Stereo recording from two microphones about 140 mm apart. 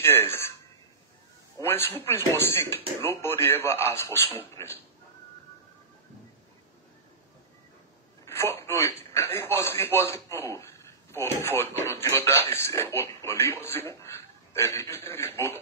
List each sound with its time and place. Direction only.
0.0 s speech: 15° left (ahead or behind)
1.6 s a man's voice: 20° left (ahead or behind)
8.3 s speech: 20° left (ahead or behind)